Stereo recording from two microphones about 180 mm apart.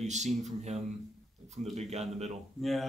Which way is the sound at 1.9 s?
40° right (ahead or behind).